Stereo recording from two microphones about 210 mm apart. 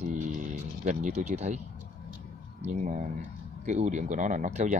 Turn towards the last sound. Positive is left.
turn(degrees=-35)  # may be behind; listen again after turning